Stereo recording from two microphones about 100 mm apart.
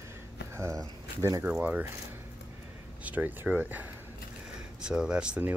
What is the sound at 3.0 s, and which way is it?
Speech, 15° right (ahead or behind).